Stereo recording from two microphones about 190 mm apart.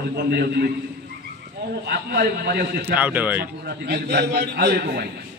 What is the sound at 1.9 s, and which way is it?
A man's voice, 55° right (ahead or behind).